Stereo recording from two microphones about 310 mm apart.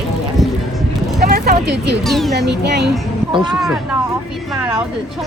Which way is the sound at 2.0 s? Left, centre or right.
Centre.